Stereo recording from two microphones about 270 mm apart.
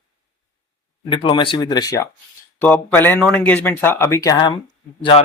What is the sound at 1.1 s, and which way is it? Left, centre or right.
Speech, centre.